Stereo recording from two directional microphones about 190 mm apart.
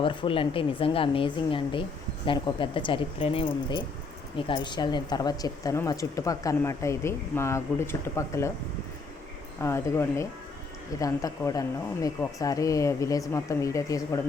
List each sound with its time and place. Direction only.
0.0 s speech: 25° left (ahead or behind)
9.6 s speech: 15° left (ahead or behind)